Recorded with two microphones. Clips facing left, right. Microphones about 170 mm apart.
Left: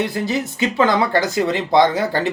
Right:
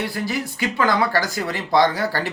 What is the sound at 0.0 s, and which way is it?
Speech, 20° left (ahead or behind).